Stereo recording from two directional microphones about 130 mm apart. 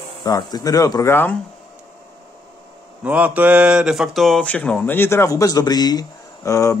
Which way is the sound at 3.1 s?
10° right (ahead or behind).